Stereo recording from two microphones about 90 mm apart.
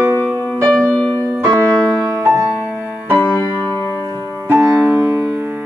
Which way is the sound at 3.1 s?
20° left (ahead or behind).